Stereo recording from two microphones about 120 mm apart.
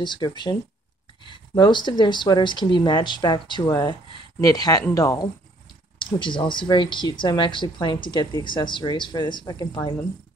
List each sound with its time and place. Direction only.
0.0 s speech: 40° left (ahead or behind)
1.6 s speech: 40° left (ahead or behind)
5.9 s speech: 40° left (ahead or behind)